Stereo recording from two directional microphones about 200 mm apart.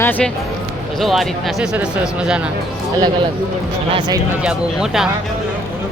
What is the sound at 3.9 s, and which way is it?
Speech, 20° right (ahead or behind).